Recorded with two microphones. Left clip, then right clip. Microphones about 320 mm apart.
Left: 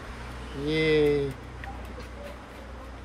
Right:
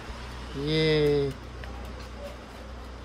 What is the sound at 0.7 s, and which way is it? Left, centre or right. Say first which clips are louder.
Speech: left 1 dB; centre.